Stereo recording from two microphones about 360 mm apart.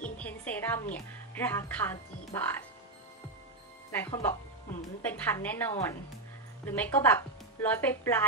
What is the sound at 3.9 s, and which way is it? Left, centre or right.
Speech, centre.